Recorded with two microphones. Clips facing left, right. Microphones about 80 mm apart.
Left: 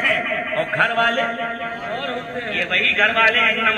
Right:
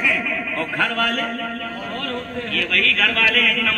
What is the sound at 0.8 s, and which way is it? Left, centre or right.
Speech, left.